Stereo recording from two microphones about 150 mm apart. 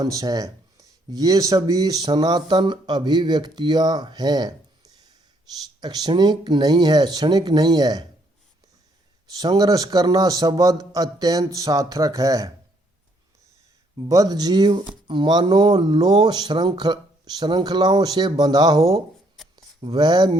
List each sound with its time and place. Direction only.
0.0 s speech: 25° right (ahead or behind)
9.4 s speech: 25° right (ahead or behind)
13.9 s speech: 25° right (ahead or behind)
19.4 s a sound: centre (ahead or behind)
19.9 s speech: 25° right (ahead or behind)